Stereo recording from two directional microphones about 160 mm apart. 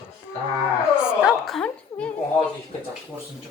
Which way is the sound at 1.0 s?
5° right (ahead or behind).